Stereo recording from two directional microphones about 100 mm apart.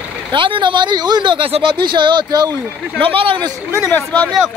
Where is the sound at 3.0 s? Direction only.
60° right (ahead or behind).